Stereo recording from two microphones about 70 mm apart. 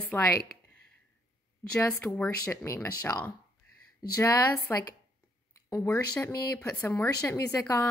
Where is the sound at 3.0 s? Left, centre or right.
Left.